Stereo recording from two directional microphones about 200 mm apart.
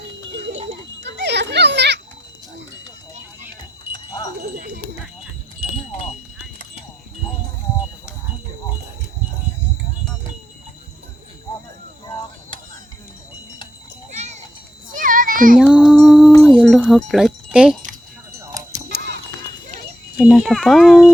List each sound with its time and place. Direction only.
1.0 s children playing: 60° right (ahead or behind)
3.9 s wind chime: 20° left (ahead or behind)
5.7 s wind chime: 30° left (ahead or behind)
14.1 s children playing: 35° right (ahead or behind)
15.5 s music: 5° right (ahead or behind)
16.4 s wind chime: centre (ahead or behind)
17.1 s speech: centre (ahead or behind)
18.3 s a sound: 15° right (ahead or behind)
18.9 s music: 55° right (ahead or behind)
20.1 s speech: centre (ahead or behind)